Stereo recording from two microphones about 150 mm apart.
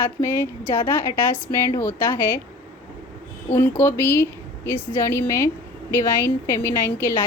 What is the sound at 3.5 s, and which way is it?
Speech, 15° left (ahead or behind).